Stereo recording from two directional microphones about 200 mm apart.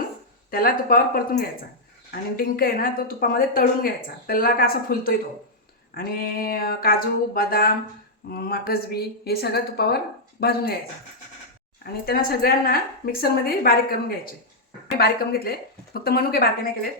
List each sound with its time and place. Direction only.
0.5 s a woman's voice: 45° left (ahead or behind)
12.0 s a woman's voice: 50° left (ahead or behind)